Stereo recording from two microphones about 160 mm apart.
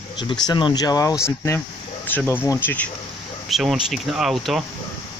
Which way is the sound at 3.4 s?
Centre (ahead or behind).